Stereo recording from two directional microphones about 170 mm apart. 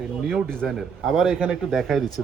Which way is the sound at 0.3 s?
Centre (ahead or behind).